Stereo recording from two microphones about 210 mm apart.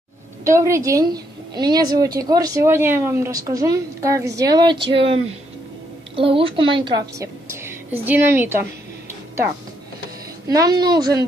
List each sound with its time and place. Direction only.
0.4 s a woman's voice: 15° right (ahead or behind)
10.5 s a woman's voice: 20° right (ahead or behind)